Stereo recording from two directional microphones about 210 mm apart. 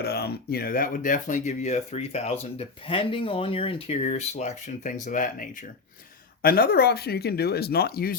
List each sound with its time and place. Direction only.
0.0 s speech: 50° left (ahead or behind)